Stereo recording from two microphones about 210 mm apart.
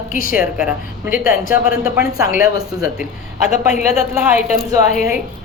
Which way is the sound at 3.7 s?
35° left (ahead or behind).